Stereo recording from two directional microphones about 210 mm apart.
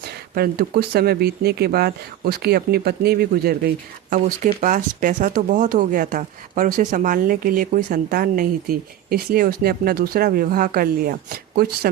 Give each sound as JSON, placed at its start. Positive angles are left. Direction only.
{"t": 0.3, "sound": "speech", "side_deg": -45}
{"t": 4.6, "sound": "speech", "side_deg": -40}